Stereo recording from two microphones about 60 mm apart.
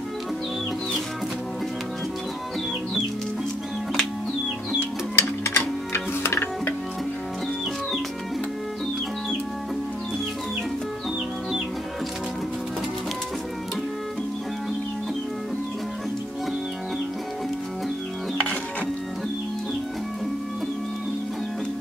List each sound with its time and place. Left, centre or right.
5.1 s music: left